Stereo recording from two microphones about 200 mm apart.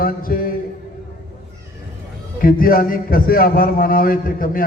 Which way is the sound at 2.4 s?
45° left (ahead or behind).